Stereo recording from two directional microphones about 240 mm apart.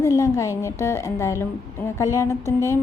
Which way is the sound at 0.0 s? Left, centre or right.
Centre.